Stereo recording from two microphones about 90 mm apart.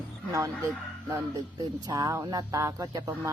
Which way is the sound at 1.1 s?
45° right (ahead or behind).